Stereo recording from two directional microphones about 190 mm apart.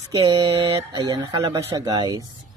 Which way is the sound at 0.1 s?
25° right (ahead or behind).